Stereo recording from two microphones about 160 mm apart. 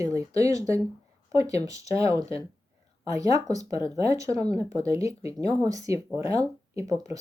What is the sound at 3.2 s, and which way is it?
Speech, 20° right (ahead or behind).